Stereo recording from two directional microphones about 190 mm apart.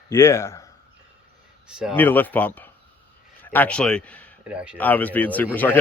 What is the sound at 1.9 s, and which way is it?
Speech, 10° left (ahead or behind).